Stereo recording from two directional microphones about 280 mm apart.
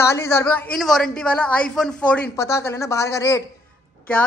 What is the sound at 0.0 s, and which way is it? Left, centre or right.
A man's voice, centre.